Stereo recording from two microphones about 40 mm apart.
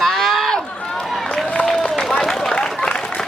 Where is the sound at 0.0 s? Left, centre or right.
Centre.